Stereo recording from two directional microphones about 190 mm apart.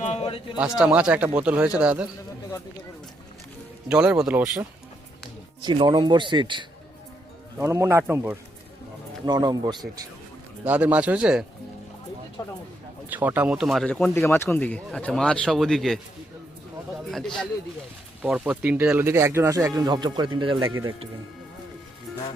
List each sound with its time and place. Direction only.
0.0 s a sound: 35° left (ahead or behind)
0.5 s speech: 5° right (ahead or behind)
3.8 s speech: 5° right (ahead or behind)
5.6 s speech: 25° right (ahead or behind)
10.6 s speech: 5° right (ahead or behind)
12.4 s speech: 20° left (ahead or behind)
13.1 s speech: 10° right (ahead or behind)
17.1 s speech: centre (ahead or behind); by 20.7 s 25° right (ahead or behind)